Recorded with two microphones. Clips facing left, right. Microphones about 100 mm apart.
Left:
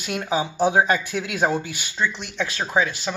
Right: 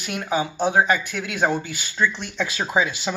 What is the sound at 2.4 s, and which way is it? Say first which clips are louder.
Speech: even; 10° right (ahead or behind).